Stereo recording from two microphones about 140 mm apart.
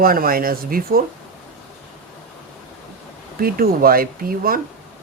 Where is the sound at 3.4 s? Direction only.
90° right.